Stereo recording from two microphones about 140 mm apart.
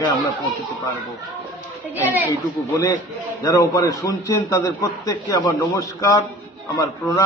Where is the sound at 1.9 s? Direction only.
15° right (ahead or behind).